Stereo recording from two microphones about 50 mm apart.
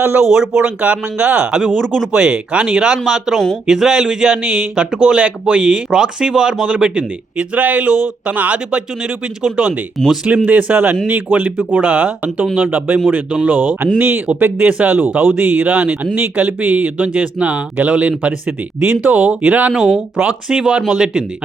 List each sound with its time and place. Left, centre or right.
0.2 s speech: centre
0.6 s speech: right
1.6 s speech: centre
2.1 s speech: centre
10.2 s speech: right
19.7 s speech: centre
20.2 s speech: centre